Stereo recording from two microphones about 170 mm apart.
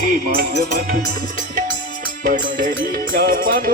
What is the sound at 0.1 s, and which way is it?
Music, 60° right (ahead or behind).